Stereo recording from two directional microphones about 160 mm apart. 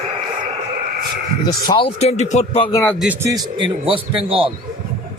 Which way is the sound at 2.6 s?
25° left (ahead or behind).